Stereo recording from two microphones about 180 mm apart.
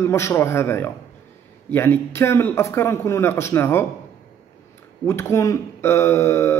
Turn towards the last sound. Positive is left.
turn(degrees=15)  # may be behind; listen again after turning